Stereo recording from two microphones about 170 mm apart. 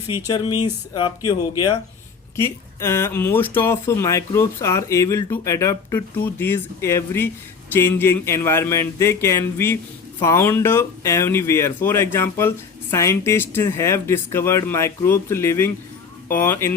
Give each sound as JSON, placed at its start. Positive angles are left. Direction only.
{"t": 0.3, "sound": "speech", "side_deg": 25}